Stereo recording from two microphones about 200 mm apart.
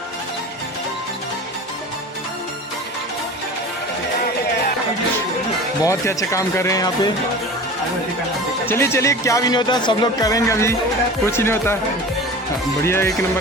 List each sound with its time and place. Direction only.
5.8 s speech: 15° left (ahead or behind)
8.6 s speech: 10° left (ahead or behind)
12.8 s speech: 10° left (ahead or behind)